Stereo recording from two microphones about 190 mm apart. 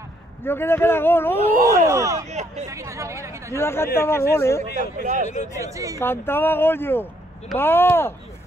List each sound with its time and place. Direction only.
0.4 s speech: 10° left (ahead or behind)
1.9 s speech: 15° right (ahead or behind)
2.2 s speech: 35° right (ahead or behind)
2.6 s speech: 15° right (ahead or behind)
3.5 s speech: 15° left (ahead or behind)
5.0 s speech: 40° right (ahead or behind)
5.6 s speech: 15° right (ahead or behind)
5.9 s speech: 10° left (ahead or behind)